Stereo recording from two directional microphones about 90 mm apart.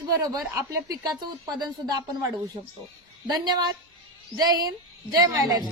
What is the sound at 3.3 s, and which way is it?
Speech, 50° right (ahead or behind).